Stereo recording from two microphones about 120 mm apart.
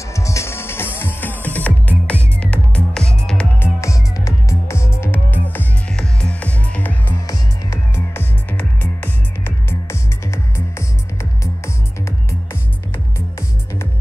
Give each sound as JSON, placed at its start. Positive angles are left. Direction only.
{"t": 0.1, "sound": "music", "side_deg": 25}
{"t": 3.5, "sound": "music", "side_deg": 20}